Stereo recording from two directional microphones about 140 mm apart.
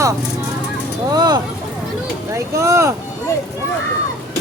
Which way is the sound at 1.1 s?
30° right (ahead or behind).